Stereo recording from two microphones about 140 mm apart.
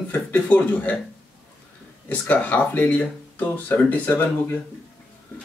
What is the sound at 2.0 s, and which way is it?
Speech, 10° left (ahead or behind).